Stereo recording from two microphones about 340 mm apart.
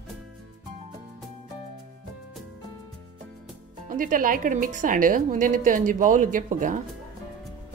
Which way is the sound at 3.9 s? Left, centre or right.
Right.